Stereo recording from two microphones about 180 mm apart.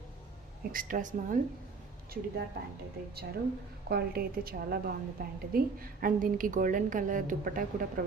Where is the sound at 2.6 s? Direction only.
60° right (ahead or behind).